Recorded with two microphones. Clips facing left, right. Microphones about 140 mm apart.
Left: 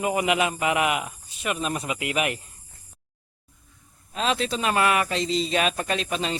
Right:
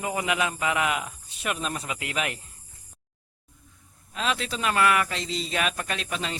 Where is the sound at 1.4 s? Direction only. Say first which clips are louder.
Left 2 dB; centre (ahead or behind).